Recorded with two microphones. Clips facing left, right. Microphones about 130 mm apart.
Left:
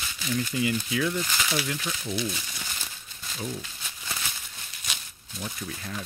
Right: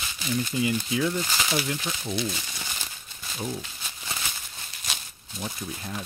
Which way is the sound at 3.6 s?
20° right (ahead or behind).